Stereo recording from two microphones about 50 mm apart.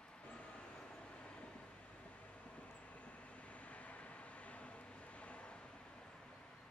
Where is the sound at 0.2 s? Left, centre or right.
Left.